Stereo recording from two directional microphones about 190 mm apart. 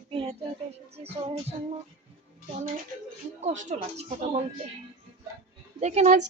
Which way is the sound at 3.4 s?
40° right (ahead or behind).